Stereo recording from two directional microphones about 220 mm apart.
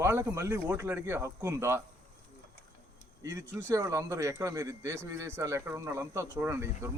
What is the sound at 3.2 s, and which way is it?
Speech, 15° right (ahead or behind).